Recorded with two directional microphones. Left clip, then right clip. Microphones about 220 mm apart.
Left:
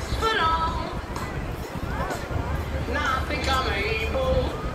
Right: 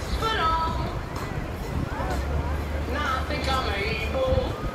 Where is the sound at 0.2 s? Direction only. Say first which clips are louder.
Left 2 dB; 20° left (ahead or behind).